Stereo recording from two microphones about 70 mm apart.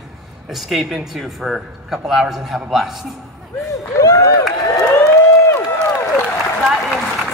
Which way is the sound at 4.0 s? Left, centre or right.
Left.